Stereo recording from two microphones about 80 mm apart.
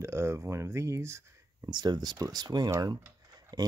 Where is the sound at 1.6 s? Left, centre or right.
Right.